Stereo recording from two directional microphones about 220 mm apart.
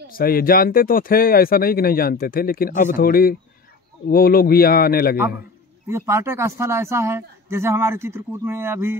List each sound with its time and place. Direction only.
0.2 s speech: 40° left (ahead or behind)
5.9 s a man's voice: 10° right (ahead or behind)